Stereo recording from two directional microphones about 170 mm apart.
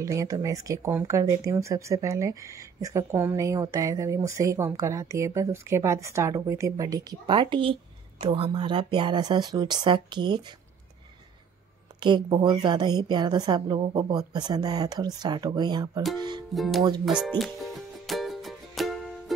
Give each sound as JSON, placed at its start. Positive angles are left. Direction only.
{"t": 0.0, "sound": "speech", "side_deg": -20}
{"t": 12.0, "sound": "speech", "side_deg": -25}
{"t": 16.2, "sound": "music", "side_deg": -25}
{"t": 16.5, "sound": "speech", "side_deg": 0}
{"t": 17.4, "sound": "music", "side_deg": 0}